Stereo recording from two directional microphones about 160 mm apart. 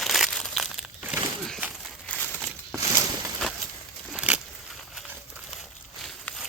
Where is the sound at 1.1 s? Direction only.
Centre (ahead or behind).